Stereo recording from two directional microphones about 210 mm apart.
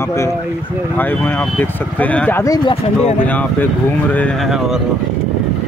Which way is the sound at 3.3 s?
5° left (ahead or behind).